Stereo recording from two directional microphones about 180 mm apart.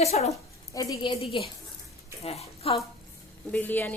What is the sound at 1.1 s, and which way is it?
A woman's voice, 30° left (ahead or behind).